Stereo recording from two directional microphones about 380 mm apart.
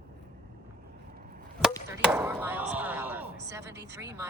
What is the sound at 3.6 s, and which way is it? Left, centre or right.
Speech, right.